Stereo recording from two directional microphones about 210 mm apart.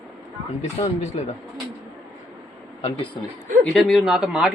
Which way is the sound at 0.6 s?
30° left (ahead or behind).